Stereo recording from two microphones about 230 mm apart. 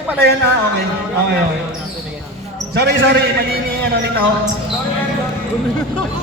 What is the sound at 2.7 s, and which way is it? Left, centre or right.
Speech, right.